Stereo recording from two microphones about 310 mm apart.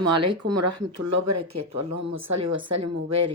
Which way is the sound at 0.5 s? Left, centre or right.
Right.